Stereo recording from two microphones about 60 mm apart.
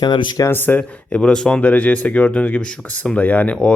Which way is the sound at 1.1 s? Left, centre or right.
Centre.